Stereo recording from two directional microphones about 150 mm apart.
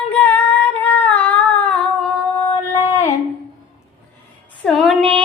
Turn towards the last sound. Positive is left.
turn(degrees=5)  # may be behind; listen again after turning